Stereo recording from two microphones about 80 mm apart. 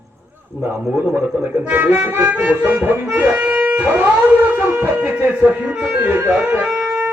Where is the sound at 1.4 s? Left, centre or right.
Right.